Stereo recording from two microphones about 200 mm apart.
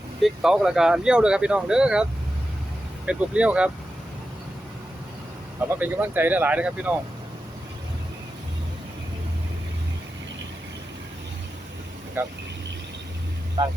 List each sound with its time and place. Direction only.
0.2 s speech: centre (ahead or behind)
3.1 s speech: 5° right (ahead or behind)
5.5 s speech: 10° right (ahead or behind)
12.2 s speech: 10° right (ahead or behind)
13.6 s speech: 20° right (ahead or behind)